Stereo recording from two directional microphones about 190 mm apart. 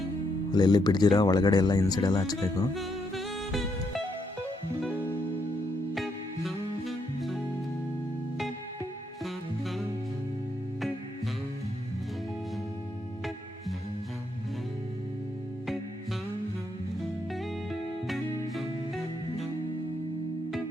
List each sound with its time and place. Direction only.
0.5 s speech: 20° left (ahead or behind)
2.7 s music: centre (ahead or behind)
5.9 s music: centre (ahead or behind)
9.2 s music: centre (ahead or behind)
17.3 s music: centre (ahead or behind)